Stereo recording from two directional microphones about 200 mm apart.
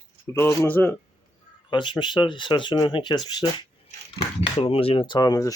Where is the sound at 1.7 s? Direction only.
25° left (ahead or behind).